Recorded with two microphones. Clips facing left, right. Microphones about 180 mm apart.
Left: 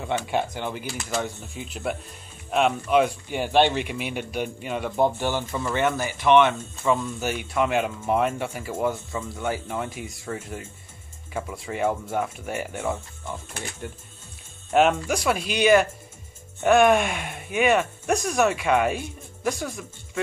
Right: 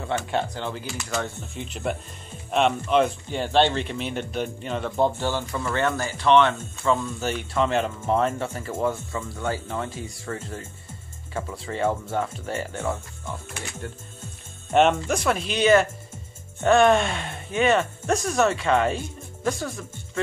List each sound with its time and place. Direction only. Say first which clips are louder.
0.0 s speech: even; 10° left (ahead or behind)
14.7 s speech: right 1 dB; 5° left (ahead or behind)